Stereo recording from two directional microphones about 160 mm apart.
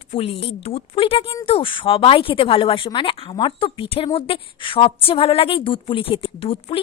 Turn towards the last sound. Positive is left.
turn(degrees=35)  # may be behind; listen again after turning